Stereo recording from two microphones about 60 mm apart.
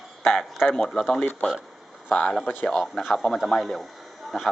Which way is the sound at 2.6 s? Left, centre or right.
Centre.